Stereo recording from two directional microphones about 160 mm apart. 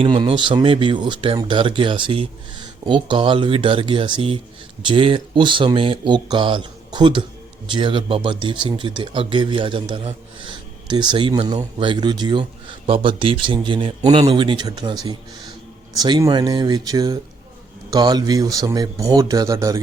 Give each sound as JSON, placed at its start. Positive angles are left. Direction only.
{"t": 0.0, "sound": "speech", "side_deg": -35}